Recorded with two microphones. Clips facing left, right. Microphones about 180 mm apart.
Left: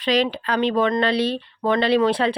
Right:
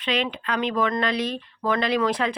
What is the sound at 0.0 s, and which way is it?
Speech, 35° left (ahead or behind).